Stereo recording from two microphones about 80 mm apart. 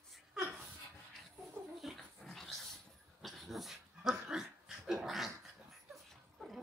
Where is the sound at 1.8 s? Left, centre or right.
Centre.